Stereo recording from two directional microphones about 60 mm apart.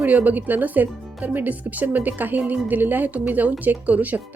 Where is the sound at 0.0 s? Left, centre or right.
Right.